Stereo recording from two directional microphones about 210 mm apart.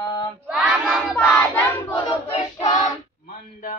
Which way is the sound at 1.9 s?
25° left (ahead or behind).